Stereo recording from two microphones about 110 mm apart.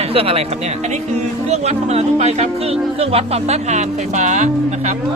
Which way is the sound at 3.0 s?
65° right (ahead or behind).